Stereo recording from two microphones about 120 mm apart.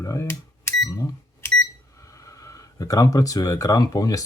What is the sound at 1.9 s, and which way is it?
Speech, 25° left (ahead or behind).